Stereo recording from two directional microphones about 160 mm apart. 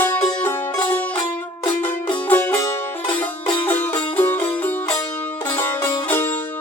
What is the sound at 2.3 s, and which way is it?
Music, 10° left (ahead or behind).